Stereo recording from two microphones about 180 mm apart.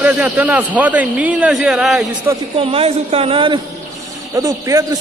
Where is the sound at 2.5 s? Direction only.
35° right (ahead or behind).